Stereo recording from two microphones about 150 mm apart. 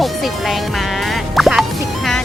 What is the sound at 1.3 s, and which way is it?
Music, centre (ahead or behind).